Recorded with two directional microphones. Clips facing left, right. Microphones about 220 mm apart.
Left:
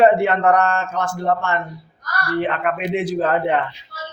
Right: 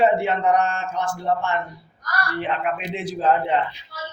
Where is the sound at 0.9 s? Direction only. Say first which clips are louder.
Left 3 dB; 45° left (ahead or behind).